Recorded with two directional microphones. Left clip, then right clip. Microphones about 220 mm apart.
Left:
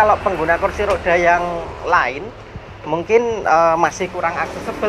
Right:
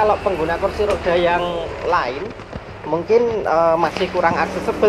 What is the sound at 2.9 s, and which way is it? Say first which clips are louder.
Speech: even; 45° left (ahead or behind).